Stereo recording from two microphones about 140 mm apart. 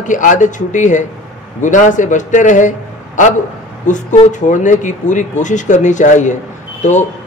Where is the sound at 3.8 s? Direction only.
60° left (ahead or behind).